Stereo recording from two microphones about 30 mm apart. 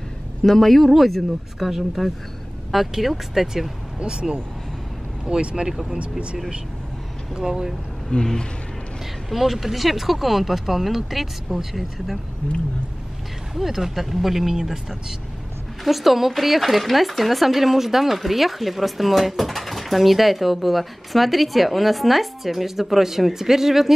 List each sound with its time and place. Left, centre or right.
0.4 s speech: centre
4.0 s speech: right
5.7 s speech: centre
5.9 s speech: right
7.4 s speech: centre
8.1 s speech: left
9.3 s speech: centre
13.6 s speech: centre
14.5 s speech: centre
15.8 s speech: centre